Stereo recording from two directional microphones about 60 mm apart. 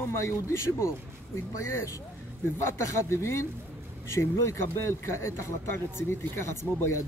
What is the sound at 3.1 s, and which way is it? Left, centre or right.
Speech, left.